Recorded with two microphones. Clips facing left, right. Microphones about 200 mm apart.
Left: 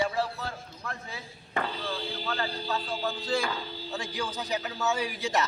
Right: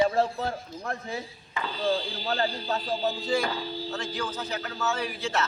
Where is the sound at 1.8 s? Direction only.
30° right (ahead or behind).